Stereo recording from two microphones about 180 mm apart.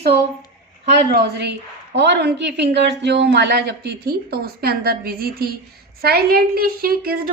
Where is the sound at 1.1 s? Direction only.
65° right (ahead or behind).